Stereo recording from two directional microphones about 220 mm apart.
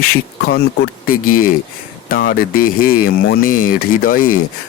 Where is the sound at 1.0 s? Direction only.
40° left (ahead or behind).